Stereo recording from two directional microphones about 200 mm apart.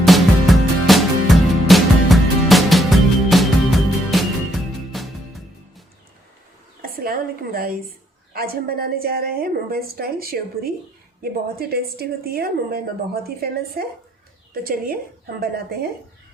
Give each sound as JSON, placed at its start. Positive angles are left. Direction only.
{"t": 0.0, "sound": "music", "side_deg": 0}
{"t": 6.8, "sound": "a sound", "side_deg": -45}
{"t": 8.3, "sound": "a woman's voice", "side_deg": -50}